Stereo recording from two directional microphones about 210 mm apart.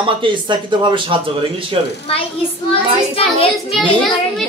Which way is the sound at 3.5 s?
Centre (ahead or behind).